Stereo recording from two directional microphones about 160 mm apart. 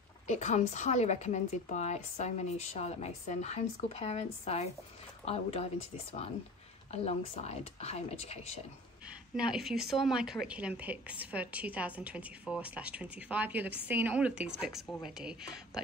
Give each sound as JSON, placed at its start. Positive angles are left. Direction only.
{"t": 0.3, "sound": "a woman's voice", "side_deg": 45}
{"t": 6.9, "sound": "speech", "side_deg": 40}
{"t": 9.4, "sound": "a woman's voice", "side_deg": -5}